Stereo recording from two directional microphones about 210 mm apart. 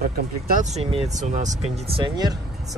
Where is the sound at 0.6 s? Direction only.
30° right (ahead or behind).